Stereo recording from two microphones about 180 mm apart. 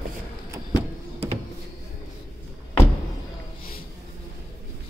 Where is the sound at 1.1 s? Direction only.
35° right (ahead or behind).